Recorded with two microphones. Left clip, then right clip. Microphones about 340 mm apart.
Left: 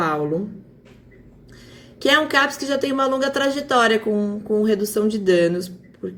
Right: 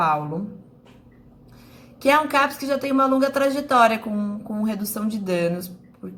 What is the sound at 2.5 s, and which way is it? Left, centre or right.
A woman's voice, centre.